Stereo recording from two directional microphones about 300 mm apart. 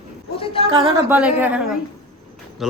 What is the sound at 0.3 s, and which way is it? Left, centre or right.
Speech, centre.